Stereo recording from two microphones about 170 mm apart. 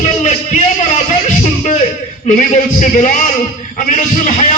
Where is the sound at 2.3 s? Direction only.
50° left (ahead or behind).